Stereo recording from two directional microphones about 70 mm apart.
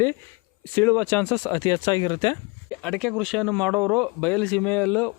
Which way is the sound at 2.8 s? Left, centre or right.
Centre.